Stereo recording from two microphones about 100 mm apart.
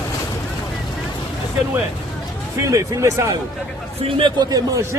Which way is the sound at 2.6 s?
30° right (ahead or behind).